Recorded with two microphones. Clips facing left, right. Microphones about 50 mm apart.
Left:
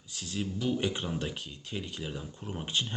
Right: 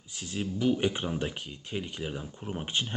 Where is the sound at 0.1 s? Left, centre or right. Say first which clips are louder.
Right 1 dB; right.